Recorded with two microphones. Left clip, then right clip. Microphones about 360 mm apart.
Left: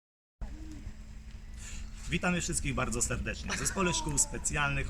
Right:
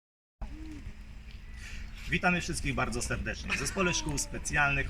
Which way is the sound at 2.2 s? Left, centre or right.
Centre.